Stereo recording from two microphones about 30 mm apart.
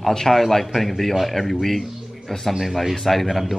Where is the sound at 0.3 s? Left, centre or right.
Centre.